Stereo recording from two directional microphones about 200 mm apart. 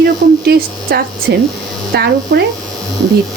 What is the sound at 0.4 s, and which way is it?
Speech, 50° right (ahead or behind).